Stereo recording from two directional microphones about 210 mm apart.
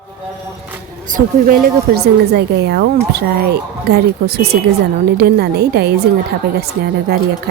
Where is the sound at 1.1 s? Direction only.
45° right (ahead or behind).